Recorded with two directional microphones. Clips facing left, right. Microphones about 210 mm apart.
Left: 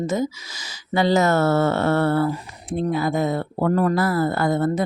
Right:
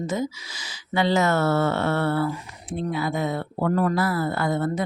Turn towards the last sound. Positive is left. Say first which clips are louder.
# left 4 dB
turn(degrees=40)  # may be behind; listen again after turning